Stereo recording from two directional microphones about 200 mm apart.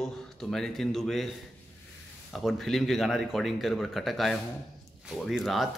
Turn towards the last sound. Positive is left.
turn(degrees=0)  # may be behind; listen again after turning